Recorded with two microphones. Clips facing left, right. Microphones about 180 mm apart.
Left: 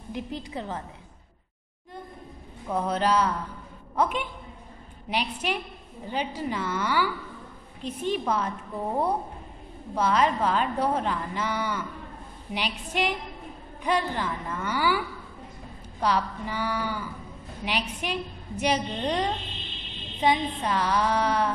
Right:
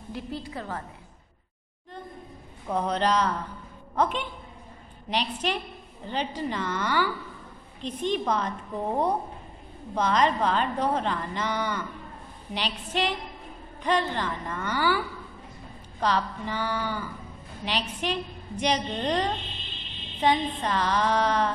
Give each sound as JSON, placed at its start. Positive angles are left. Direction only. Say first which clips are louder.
{"t": 0.1, "sound": "a woman's voice", "louder": "left 1 dB", "side_deg": 20}
{"t": 2.7, "sound": "a woman's voice", "louder": "even", "side_deg": 5}